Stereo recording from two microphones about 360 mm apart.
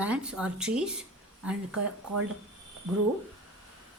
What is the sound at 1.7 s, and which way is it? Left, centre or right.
Speech, right.